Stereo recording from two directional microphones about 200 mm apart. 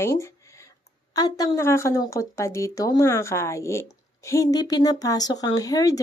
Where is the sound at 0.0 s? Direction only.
15° left (ahead or behind).